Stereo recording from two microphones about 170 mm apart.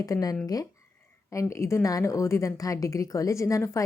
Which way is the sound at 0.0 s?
20° left (ahead or behind).